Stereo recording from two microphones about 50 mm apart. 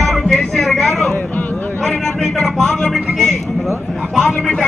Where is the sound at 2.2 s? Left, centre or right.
Centre.